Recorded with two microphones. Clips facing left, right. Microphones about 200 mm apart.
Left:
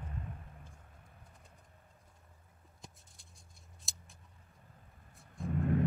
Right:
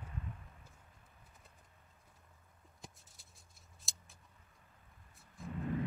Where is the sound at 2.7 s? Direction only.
Centre (ahead or behind).